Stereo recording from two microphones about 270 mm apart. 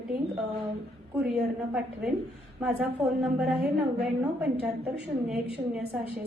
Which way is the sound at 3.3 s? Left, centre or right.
Centre.